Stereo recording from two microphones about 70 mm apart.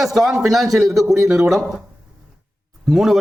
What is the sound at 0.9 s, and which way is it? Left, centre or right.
Speech, right.